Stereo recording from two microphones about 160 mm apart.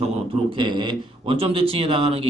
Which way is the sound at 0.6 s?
30° right (ahead or behind).